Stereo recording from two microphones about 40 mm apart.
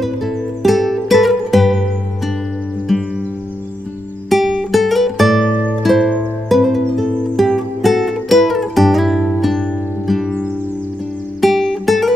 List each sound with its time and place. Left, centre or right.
0.0 s music: centre
4.3 s music: centre
5.5 s music: left
5.8 s music: centre
11.4 s music: centre